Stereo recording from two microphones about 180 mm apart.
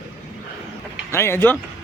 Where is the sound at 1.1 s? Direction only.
15° left (ahead or behind).